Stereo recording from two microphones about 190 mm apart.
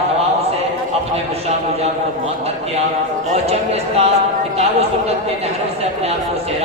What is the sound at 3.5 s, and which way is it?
Speech, 35° right (ahead or behind).